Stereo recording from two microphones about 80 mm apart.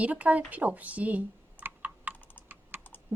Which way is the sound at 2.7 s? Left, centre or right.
Right.